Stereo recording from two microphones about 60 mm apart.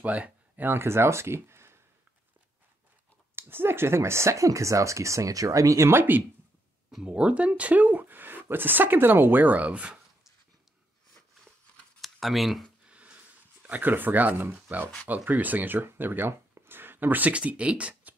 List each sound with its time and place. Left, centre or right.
0.0 s speech: right
0.7 s speech: right
3.3 s speech: right
5.9 s speech: right
7.1 s speech: centre
12.0 s speech: centre
12.8 s a sound: right
14.7 s speech: right